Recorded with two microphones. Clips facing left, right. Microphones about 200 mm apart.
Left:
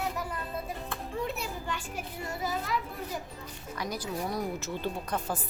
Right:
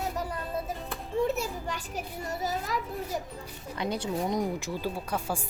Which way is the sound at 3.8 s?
25° right (ahead or behind).